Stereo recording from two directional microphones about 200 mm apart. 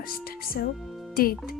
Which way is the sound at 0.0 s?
45° left (ahead or behind).